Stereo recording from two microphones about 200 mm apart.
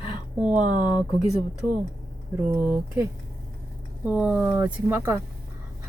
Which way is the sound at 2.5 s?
10° right (ahead or behind).